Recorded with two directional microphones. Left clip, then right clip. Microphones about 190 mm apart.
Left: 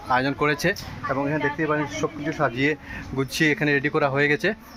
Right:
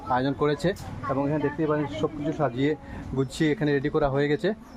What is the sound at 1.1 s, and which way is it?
Speech, 15° left (ahead or behind).